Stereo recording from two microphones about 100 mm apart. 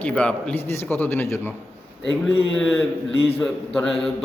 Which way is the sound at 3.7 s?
5° left (ahead or behind).